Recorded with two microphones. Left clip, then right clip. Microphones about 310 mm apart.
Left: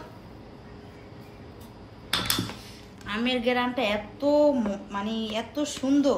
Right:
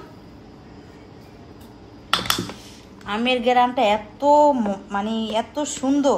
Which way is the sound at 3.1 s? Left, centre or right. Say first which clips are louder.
Right 6 dB; right.